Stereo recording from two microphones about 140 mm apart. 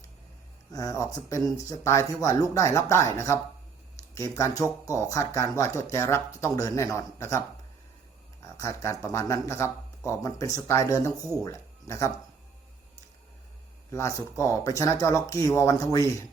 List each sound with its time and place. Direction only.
0.7 s speech: 25° left (ahead or behind)
8.5 s speech: 20° left (ahead or behind)
13.9 s speech: 20° left (ahead or behind)